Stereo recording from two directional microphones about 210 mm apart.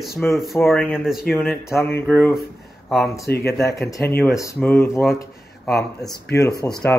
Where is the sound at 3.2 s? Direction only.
50° left (ahead or behind).